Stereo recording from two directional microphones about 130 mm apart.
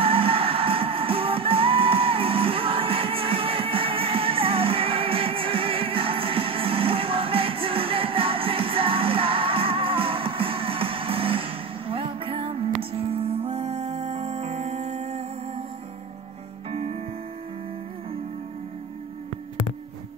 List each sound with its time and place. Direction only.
0.0 s music: 45° right (ahead or behind)